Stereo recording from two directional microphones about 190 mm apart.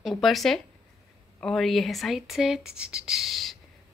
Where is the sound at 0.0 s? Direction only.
Centre (ahead or behind).